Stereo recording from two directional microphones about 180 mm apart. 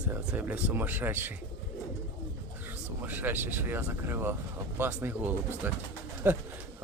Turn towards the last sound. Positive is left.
turn(degrees=-10)  # may be behind; listen again after turning